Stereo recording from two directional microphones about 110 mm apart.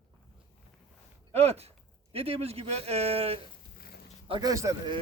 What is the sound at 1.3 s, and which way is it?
A man's voice, 70° right (ahead or behind).